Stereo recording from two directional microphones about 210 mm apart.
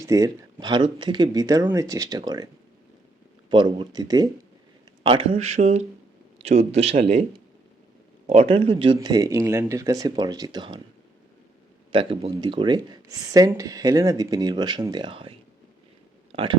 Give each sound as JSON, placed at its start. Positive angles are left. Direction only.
{"t": 0.0, "sound": "speech", "side_deg": -15}
{"t": 3.5, "sound": "speech", "side_deg": -20}
{"t": 8.3, "sound": "speech", "side_deg": -30}
{"t": 11.9, "sound": "speech", "side_deg": -25}